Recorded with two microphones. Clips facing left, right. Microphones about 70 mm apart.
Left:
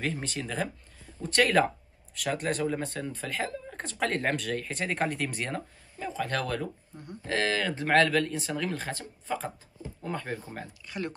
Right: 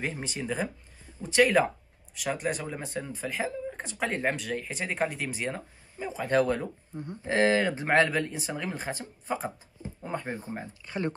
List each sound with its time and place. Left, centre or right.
0.0 s speech: centre